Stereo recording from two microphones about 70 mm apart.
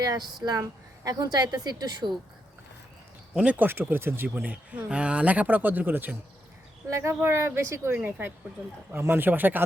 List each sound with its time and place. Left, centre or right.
0.0 s a woman's voice: right
3.3 s speech: centre
3.7 s speech: right
6.9 s speech: right